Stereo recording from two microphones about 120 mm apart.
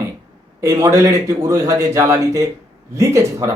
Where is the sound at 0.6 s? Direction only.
25° right (ahead or behind).